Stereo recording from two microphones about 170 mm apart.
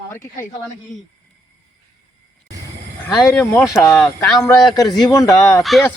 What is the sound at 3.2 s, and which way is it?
Speech, 15° left (ahead or behind).